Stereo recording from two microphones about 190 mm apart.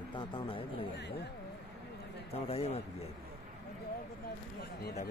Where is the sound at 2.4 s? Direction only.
30° left (ahead or behind).